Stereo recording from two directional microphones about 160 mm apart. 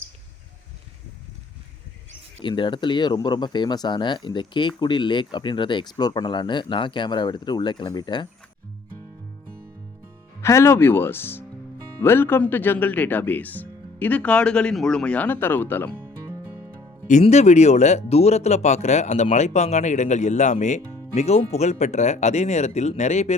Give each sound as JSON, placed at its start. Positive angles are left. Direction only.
{"t": 2.4, "sound": "speech", "side_deg": 30}
{"t": 10.4, "sound": "speech", "side_deg": 15}
{"t": 17.1, "sound": "speech", "side_deg": 45}